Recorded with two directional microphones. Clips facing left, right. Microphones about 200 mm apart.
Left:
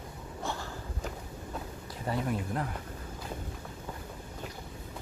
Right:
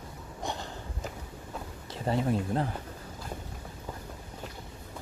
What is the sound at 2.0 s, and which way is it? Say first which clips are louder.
Speech: right 4 dB; 30° right (ahead or behind).